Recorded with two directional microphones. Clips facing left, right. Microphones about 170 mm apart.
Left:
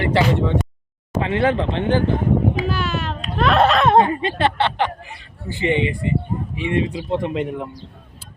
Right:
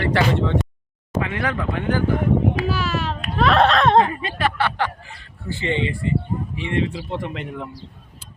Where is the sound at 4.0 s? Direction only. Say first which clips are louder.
Left 2 dB; 25° left (ahead or behind).